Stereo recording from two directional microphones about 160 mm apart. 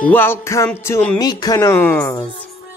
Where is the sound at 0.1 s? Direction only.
15° left (ahead or behind).